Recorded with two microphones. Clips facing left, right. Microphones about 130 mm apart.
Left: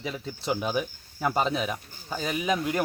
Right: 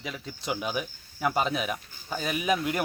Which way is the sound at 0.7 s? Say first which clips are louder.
Left 3 dB; 5° right (ahead or behind).